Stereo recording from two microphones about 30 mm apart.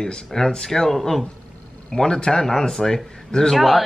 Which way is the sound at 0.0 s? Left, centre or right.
Centre.